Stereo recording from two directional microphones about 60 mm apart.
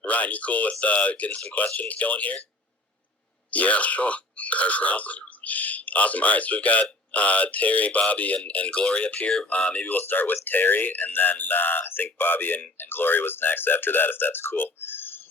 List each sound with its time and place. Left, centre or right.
0.0 s speech: left
3.5 s speech: left